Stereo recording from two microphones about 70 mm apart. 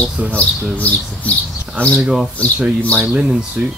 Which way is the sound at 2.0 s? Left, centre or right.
Centre.